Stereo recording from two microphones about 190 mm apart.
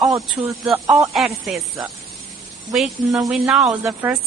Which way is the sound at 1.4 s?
Centre (ahead or behind).